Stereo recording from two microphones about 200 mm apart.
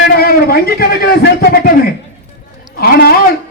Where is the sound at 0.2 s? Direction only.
50° left (ahead or behind).